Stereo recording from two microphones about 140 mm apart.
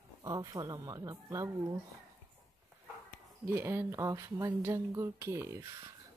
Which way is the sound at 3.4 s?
15° right (ahead or behind).